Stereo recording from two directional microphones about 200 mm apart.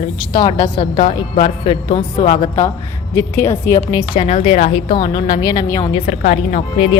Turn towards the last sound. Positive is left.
turn(degrees=25)  # may be behind; listen again after turning